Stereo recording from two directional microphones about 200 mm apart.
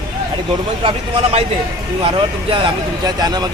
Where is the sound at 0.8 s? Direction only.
25° right (ahead or behind).